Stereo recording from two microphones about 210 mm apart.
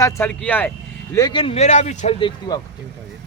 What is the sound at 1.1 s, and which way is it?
Speech, 20° left (ahead or behind).